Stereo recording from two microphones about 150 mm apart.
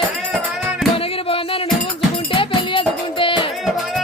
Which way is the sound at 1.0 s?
40° left (ahead or behind).